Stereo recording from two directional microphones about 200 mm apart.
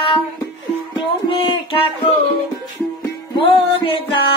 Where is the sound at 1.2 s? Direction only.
25° left (ahead or behind).